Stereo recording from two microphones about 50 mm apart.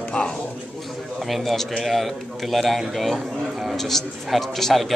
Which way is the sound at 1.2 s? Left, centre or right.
Centre.